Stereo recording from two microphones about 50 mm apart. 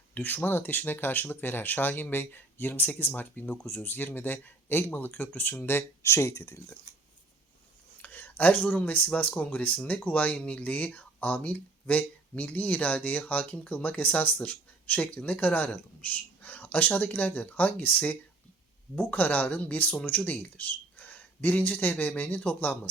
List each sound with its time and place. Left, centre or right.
0.1 s speech: left
5.6 s speech: left
6.1 s speech: left
8.0 s a sound: left
8.7 s speech: left
20.9 s a sound: left
21.9 s speech: left